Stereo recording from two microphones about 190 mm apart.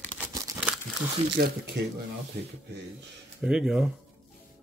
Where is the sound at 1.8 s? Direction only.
65° right (ahead or behind).